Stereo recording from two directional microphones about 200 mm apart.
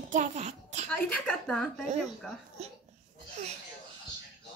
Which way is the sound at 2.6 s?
35° right (ahead or behind).